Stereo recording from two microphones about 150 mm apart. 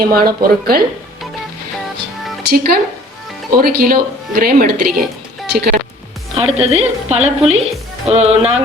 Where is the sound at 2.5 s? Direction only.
90° right.